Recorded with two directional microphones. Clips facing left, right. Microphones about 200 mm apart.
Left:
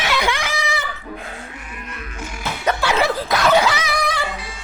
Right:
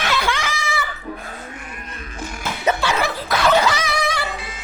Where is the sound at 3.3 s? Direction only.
5° left (ahead or behind).